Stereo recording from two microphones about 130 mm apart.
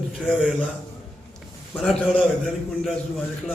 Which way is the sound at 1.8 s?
5° left (ahead or behind).